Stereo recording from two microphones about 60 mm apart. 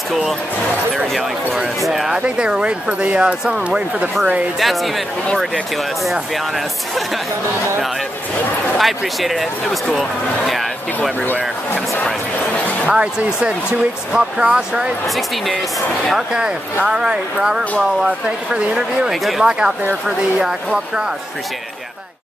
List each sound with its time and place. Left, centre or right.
0.9 s speech: centre
2.1 s speech: centre
4.6 s speech: centre
8.7 s speech: centre
11.0 s speech: left
12.8 s speech: centre
16.1 s speech: centre